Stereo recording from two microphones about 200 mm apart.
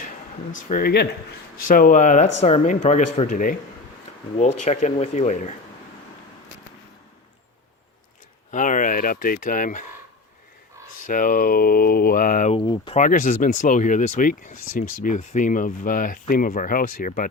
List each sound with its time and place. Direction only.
0.7 s speech: 50° left (ahead or behind)
8.4 s speech: 40° left (ahead or behind)
11.0 s speech: 40° left (ahead or behind)
12.5 s speech: 25° left (ahead or behind)
13.0 s speech: 40° left (ahead or behind)